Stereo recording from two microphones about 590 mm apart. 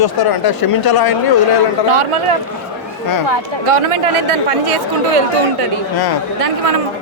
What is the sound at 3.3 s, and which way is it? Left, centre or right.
Speech, right.